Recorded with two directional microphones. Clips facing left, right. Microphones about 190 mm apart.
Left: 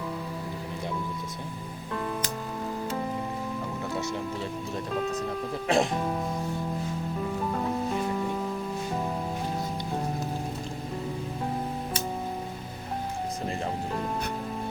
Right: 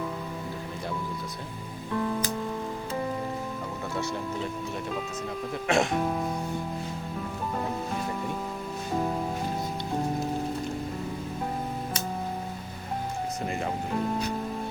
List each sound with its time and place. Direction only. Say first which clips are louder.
5.6 s speech: even; 35° left (ahead or behind)